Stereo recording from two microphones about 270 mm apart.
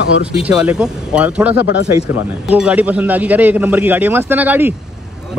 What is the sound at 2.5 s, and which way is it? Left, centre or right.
A man's voice, centre.